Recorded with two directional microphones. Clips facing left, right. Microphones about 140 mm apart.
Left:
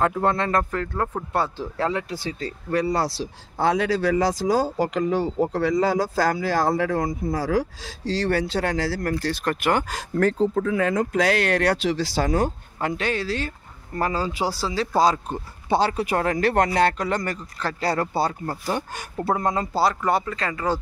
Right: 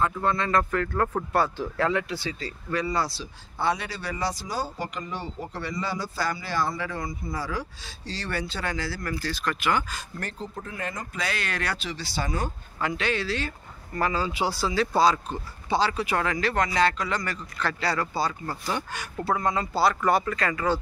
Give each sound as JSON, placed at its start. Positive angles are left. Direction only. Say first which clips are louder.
{"t": 0.0, "sound": "speech", "louder": "left 4 dB", "side_deg": 70}
{"t": 0.9, "sound": "speech", "louder": "right 1 dB", "side_deg": 10}
{"t": 1.3, "sound": "speech", "louder": "even", "side_deg": 25}
{"t": 2.7, "sound": "speech", "louder": "left 5 dB", "side_deg": 70}
{"t": 9.2, "sound": "speech", "louder": "left 4 dB", "side_deg": 55}
{"t": 12.8, "sound": "a man's voice", "louder": "left 3 dB", "side_deg": 45}
{"t": 15.7, "sound": "a man's voice", "louder": "left 4 dB", "side_deg": 55}
{"t": 17.6, "sound": "a man's voice", "louder": "left 3 dB", "side_deg": 40}
{"t": 20.1, "sound": "speech", "louder": "even", "side_deg": 25}